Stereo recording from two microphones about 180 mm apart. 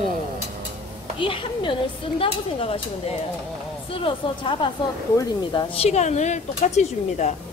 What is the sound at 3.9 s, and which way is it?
Speech, 30° left (ahead or behind).